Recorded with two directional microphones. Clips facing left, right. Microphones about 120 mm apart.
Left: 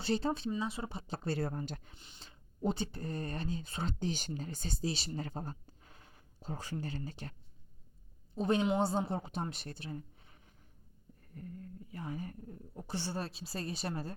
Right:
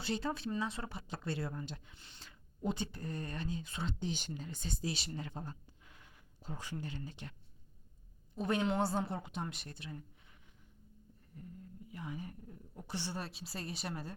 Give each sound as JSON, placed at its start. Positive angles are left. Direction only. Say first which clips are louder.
{"t": 0.0, "sound": "a woman's voice", "louder": "left 4 dB", "side_deg": 30}
{"t": 0.6, "sound": "speech", "louder": "left 2 dB", "side_deg": 15}
{"t": 1.0, "sound": "a woman's voice", "louder": "left 5 dB", "side_deg": 35}
{"t": 2.0, "sound": "speech", "louder": "left 1 dB", "side_deg": 20}
{"t": 8.4, "sound": "a woman's voice", "louder": "left 3 dB", "side_deg": 25}
{"t": 11.9, "sound": "a sound", "louder": "left 3 dB", "side_deg": 40}
{"t": 12.7, "sound": "a woman's voice", "louder": "left 3 dB", "side_deg": 30}